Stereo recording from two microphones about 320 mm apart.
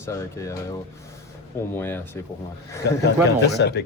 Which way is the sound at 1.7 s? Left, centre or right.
Centre.